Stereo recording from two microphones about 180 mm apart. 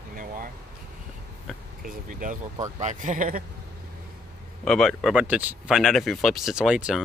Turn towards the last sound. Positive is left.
turn(degrees=-5)  # may be behind; listen again after turning